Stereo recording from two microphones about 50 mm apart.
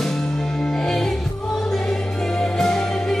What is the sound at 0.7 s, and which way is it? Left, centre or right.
Music, centre.